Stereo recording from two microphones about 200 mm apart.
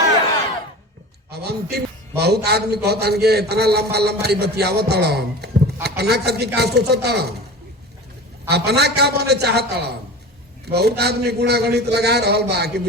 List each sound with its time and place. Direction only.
1.3 s a man's voice: 55° right (ahead or behind)
8.4 s a man's voice: 55° right (ahead or behind)